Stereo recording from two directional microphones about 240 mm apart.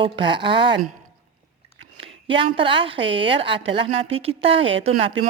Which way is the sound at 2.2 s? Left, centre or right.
Right.